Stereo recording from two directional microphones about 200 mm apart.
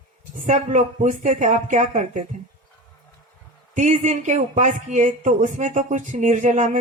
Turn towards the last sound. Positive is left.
turn(degrees=-40)  # may be behind; listen again after turning